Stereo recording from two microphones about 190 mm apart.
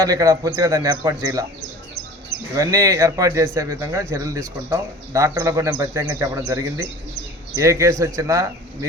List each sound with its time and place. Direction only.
0.0 s speech: 15° right (ahead or behind)
2.6 s speech: 15° right (ahead or behind)